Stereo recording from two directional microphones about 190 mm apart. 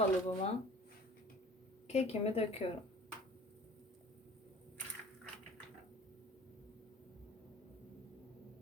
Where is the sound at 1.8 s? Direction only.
35° left (ahead or behind).